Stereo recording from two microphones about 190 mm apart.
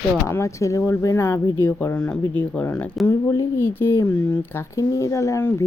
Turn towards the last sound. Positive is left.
turn(degrees=15)  # may be behind; listen again after turning